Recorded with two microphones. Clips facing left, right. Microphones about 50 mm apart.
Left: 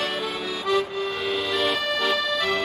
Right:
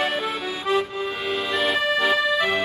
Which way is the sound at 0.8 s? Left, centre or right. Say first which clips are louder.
Even; centre.